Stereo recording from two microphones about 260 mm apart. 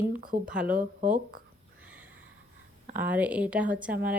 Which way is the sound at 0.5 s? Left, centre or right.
Centre.